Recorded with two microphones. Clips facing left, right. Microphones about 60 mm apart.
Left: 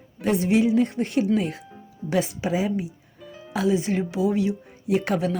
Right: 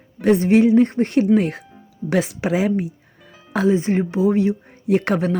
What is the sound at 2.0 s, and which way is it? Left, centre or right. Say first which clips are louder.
Speech: right 4 dB; right.